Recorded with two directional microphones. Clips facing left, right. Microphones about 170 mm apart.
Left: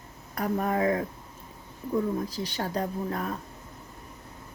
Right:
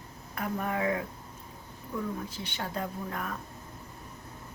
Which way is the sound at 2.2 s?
35° left (ahead or behind).